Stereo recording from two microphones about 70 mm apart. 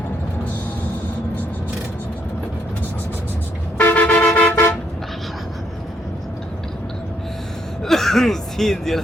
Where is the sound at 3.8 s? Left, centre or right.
Left.